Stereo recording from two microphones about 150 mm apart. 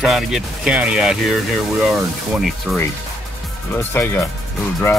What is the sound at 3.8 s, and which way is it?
Speech, 15° left (ahead or behind).